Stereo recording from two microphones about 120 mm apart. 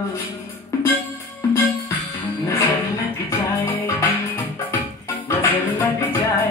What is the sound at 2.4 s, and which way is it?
Music, 25° left (ahead or behind).